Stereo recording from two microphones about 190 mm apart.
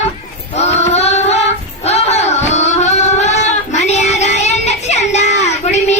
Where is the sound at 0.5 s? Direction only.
35° left (ahead or behind).